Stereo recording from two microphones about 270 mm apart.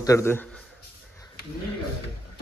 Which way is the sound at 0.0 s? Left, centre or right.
Centre.